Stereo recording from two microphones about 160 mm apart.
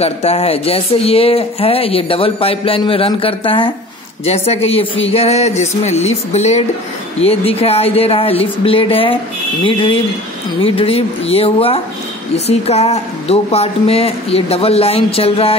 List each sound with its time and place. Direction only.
0.0 s speech: 40° left (ahead or behind)